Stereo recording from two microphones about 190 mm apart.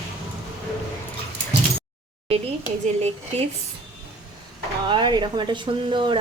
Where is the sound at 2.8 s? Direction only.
35° right (ahead or behind).